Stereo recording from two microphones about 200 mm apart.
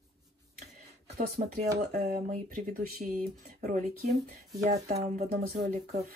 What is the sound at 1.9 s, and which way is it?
Speech, 50° right (ahead or behind).